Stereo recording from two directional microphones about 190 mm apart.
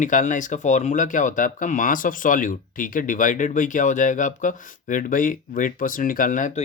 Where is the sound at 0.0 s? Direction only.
40° left (ahead or behind).